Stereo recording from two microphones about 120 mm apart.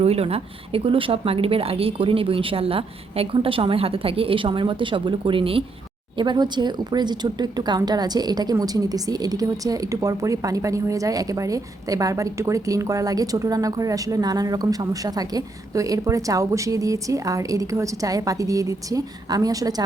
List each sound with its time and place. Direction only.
0.0 s speech: 55° right (ahead or behind)
6.1 s speech: 35° right (ahead or behind)